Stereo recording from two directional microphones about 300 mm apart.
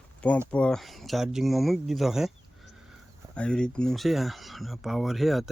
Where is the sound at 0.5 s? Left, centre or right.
Centre.